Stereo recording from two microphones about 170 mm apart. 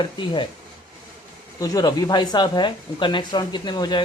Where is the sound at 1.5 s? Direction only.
20° left (ahead or behind).